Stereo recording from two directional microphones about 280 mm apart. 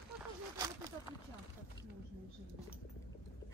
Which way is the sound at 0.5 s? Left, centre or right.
Centre.